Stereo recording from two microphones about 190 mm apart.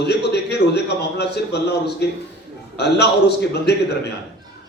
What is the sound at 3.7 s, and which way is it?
Speech, 60° left (ahead or behind).